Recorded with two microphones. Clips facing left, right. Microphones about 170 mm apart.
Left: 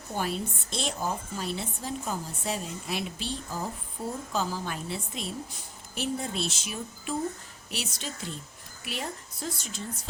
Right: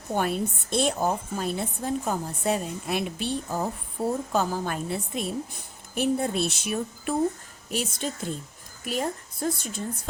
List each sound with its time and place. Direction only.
0.1 s a woman's voice: 55° right (ahead or behind)